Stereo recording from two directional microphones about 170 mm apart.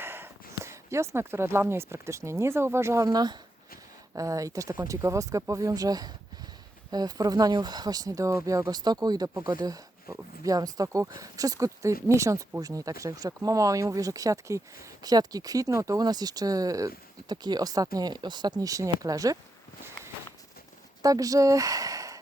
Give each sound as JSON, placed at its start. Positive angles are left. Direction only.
{"t": 0.0, "sound": "speech", "side_deg": -15}
{"t": 21.0, "sound": "speech", "side_deg": -20}